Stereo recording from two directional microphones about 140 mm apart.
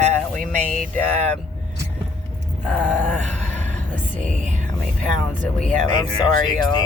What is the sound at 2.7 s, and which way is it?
Speech, 10° left (ahead or behind).